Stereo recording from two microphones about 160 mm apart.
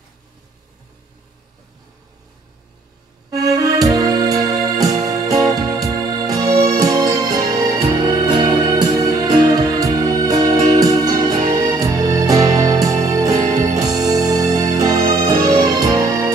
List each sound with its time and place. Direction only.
3.5 s music: 25° right (ahead or behind)
13.3 s music: 45° right (ahead or behind)
13.7 s music: 25° right (ahead or behind)